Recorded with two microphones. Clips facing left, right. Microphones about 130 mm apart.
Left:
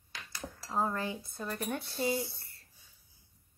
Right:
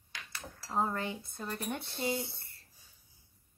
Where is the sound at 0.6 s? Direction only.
25° right (ahead or behind).